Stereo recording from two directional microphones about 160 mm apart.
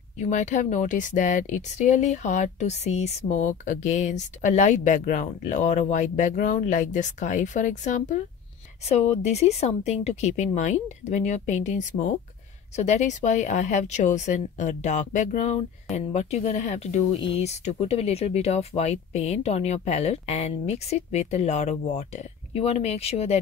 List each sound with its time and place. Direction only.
0.2 s speech: 50° left (ahead or behind)